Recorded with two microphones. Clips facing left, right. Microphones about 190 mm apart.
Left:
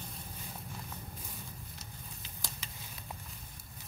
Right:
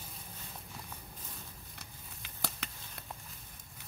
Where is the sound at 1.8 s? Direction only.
60° right (ahead or behind).